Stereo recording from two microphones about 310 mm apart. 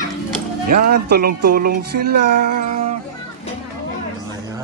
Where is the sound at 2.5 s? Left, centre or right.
Right.